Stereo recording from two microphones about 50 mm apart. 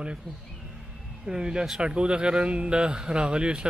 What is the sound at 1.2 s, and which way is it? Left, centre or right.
Speech, centre.